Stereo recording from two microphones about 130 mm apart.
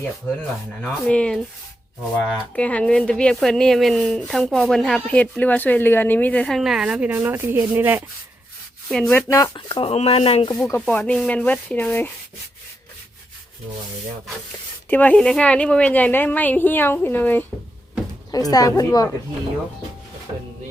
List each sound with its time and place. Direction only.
0.8 s a woman's voice: 10° left (ahead or behind)
2.6 s a woman's voice: 10° left (ahead or behind); by 8.0 s 15° right (ahead or behind)
8.9 s speech: 5° left (ahead or behind)
9.1 s a woman's voice: 25° left (ahead or behind)
9.6 s speech: 40° left (ahead or behind)
10.6 s a woman's voice: 10° left (ahead or behind)
14.8 s a woman's voice: 15° left (ahead or behind)
18.5 s a woman's voice: 25° left (ahead or behind)